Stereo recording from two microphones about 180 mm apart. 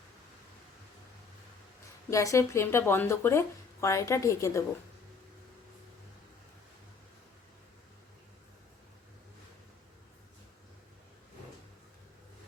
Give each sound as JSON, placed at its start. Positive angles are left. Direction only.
{"t": 2.0, "sound": "speech", "side_deg": 15}